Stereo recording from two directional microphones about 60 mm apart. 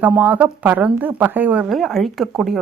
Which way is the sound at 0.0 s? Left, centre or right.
Right.